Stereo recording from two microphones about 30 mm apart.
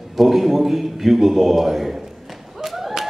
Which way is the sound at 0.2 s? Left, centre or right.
Centre.